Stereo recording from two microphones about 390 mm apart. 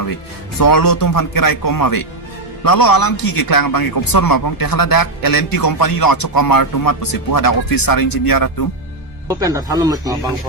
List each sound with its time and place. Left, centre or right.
0.6 s a man's voice: left
9.3 s speech: centre